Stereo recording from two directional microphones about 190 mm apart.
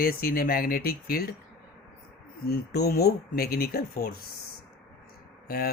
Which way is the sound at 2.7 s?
55° left (ahead or behind).